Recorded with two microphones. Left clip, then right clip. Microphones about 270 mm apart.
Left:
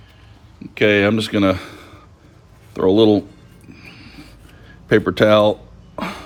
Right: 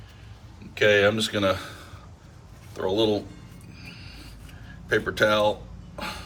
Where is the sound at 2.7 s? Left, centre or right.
Left.